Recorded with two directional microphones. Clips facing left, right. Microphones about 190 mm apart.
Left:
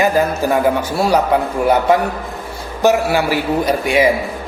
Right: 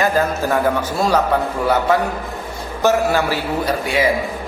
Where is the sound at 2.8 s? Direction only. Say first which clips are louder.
Left 2 dB; 15° left (ahead or behind).